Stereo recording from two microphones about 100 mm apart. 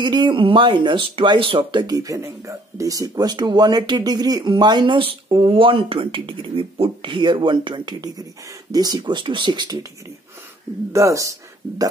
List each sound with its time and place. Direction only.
0.0 s speech: 50° right (ahead or behind)
2.0 s speech: 35° right (ahead or behind)
10.9 s speech: 30° right (ahead or behind)